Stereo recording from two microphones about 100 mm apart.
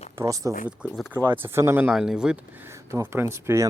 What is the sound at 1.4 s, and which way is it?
Speech, 25° right (ahead or behind).